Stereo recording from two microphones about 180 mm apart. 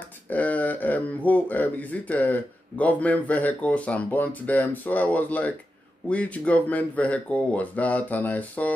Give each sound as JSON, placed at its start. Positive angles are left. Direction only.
{"t": 0.3, "sound": "speech", "side_deg": 10}